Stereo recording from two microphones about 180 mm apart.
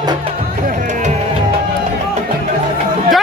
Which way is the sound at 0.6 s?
45° right (ahead or behind).